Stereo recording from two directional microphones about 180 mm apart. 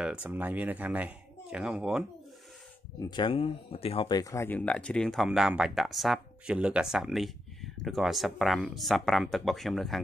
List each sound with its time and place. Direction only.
0.0 s speech: 5° right (ahead or behind)
3.0 s speech: 25° left (ahead or behind)
4.2 s speech: 15° left (ahead or behind)